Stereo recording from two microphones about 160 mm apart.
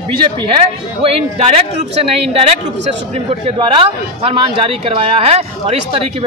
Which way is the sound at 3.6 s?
35° right (ahead or behind).